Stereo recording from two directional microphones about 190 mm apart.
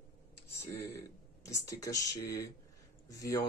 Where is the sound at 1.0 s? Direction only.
15° left (ahead or behind).